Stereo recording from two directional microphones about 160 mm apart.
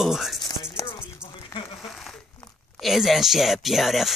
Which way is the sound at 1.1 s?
20° left (ahead or behind).